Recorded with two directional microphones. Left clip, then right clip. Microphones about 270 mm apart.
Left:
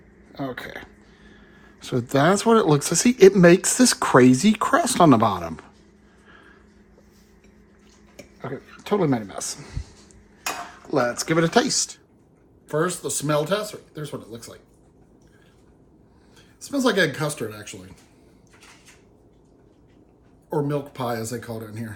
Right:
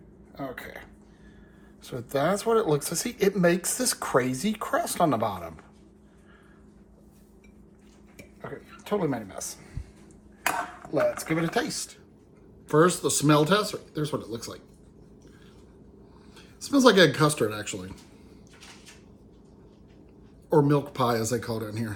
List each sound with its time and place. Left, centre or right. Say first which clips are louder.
0.3 s speech: left 5 dB; left
8.4 s speech: left 6 dB; left
10.9 s speech: left 4 dB; left
12.6 s speech: right 3 dB; centre
16.6 s speech: right 2 dB; centre
20.5 s speech: right 3 dB; centre